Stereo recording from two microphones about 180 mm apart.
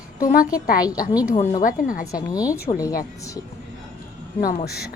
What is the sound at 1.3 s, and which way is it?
Speech, 40° left (ahead or behind).